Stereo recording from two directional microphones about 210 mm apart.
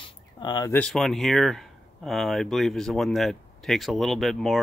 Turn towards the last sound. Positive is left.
turn(degrees=0)  # may be behind; listen again after turning